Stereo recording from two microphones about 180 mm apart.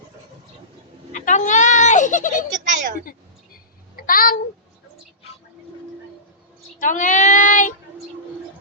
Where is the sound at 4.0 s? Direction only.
50° left (ahead or behind).